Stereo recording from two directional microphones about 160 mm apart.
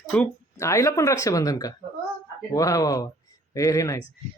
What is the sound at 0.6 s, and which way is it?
Speech, 20° left (ahead or behind).